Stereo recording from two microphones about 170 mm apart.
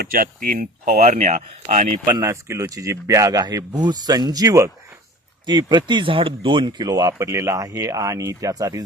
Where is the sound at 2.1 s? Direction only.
20° right (ahead or behind).